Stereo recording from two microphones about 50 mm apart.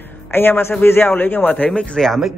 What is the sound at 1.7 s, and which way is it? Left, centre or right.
Speech, centre.